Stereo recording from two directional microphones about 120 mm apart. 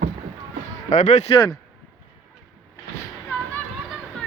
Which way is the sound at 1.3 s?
40° left (ahead or behind).